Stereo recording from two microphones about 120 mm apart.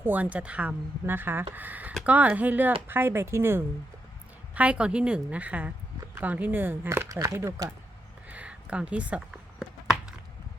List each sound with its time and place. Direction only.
0.0 s speech: 15° right (ahead or behind)
4.5 s speech: 10° right (ahead or behind)
8.3 s a sound: 10° right (ahead or behind)